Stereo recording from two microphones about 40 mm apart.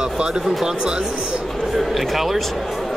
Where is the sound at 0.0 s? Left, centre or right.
Centre.